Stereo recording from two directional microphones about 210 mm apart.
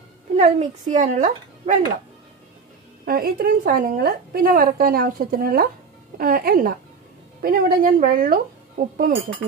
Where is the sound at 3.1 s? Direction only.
45° right (ahead or behind).